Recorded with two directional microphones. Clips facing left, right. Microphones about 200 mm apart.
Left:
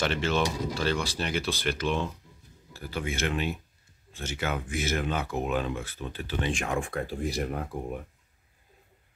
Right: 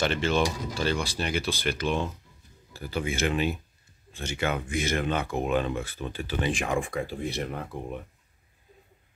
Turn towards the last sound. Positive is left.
turn(degrees=5)  # may be behind; listen again after turning